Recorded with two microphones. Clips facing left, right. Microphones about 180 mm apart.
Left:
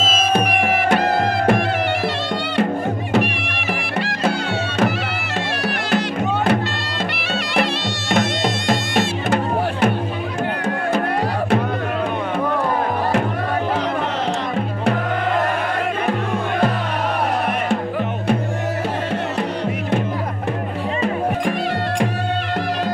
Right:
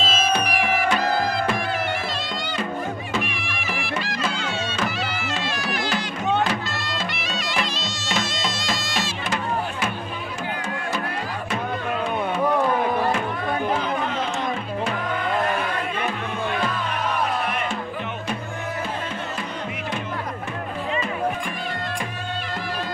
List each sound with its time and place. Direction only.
0.0 s music: 45° left (ahead or behind); by 4.3 s 65° left (ahead or behind)
5.9 s music: 60° left (ahead or behind)
8.1 s music: 60° left (ahead or behind)
16.1 s music: 50° left (ahead or behind)